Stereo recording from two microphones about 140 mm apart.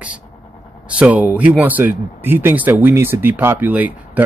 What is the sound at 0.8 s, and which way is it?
A man's voice, 10° right (ahead or behind).